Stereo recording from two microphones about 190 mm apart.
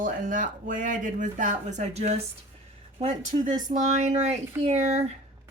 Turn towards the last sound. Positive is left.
turn(degrees=-35)  # may be behind; listen again after turning